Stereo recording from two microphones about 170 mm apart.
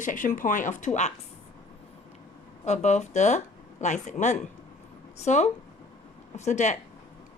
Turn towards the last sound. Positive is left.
turn(degrees=45)  # may be behind; listen again after turning